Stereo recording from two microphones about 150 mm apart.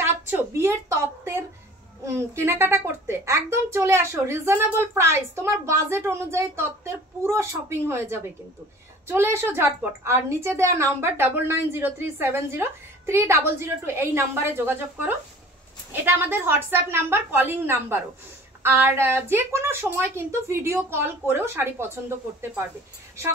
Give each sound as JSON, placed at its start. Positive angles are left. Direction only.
{"t": 0.0, "sound": "a woman's voice", "side_deg": -15}